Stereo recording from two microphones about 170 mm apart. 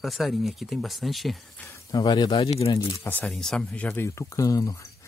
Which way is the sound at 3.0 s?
10° left (ahead or behind).